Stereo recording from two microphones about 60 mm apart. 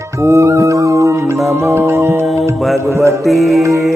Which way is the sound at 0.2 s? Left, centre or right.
Right.